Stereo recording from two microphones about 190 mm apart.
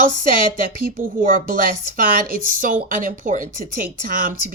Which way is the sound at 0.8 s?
50° right (ahead or behind).